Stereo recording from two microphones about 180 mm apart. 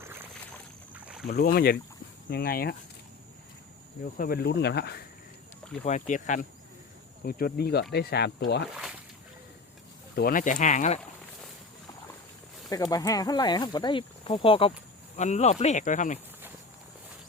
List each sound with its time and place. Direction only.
0.9 s boat: 5° right (ahead or behind)
1.3 s speech: 65° left (ahead or behind)
4.2 s speech: 60° left (ahead or behind)
5.8 s speech: 45° left (ahead or behind)
7.3 s speech: 55° left (ahead or behind)
10.2 s speech: 50° left (ahead or behind)
12.7 s speech: 20° left (ahead or behind); by 16.1 s 45° left (ahead or behind)